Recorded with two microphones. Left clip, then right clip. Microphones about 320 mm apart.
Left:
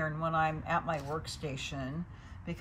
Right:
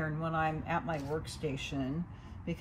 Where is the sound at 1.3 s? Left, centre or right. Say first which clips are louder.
Right 2 dB; left.